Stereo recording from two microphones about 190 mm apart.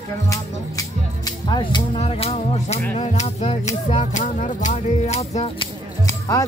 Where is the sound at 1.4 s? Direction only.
25° left (ahead or behind).